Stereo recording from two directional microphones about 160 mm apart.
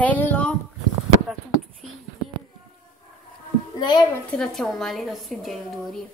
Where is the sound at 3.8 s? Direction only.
30° left (ahead or behind).